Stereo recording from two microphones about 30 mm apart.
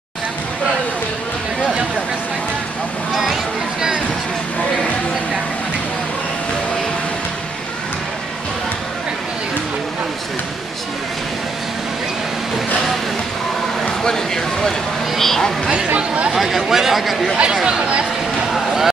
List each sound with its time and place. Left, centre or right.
13.8 s a sound: centre
15.1 s speech: centre
16.3 s speech: centre